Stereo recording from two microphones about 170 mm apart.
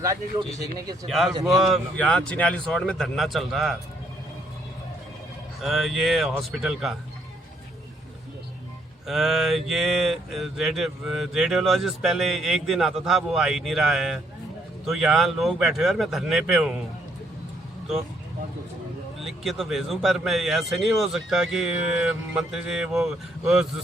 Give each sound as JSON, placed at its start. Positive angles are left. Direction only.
{"t": 0.0, "sound": "speech", "side_deg": -20}
{"t": 1.0, "sound": "speech", "side_deg": 0}
{"t": 5.6, "sound": "speech", "side_deg": 0}
{"t": 9.0, "sound": "speech", "side_deg": 0}
{"t": 19.2, "sound": "speech", "side_deg": 0}